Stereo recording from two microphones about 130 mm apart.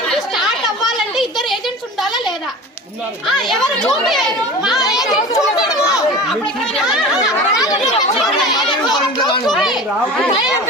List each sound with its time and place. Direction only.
0.1 s a sound: centre (ahead or behind)
3.2 s a child's voice: centre (ahead or behind)
5.3 s a child's voice: 30° left (ahead or behind)
7.5 s chatter: 30° left (ahead or behind)